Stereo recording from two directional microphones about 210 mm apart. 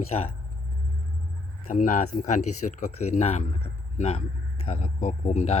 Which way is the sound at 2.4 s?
90° left.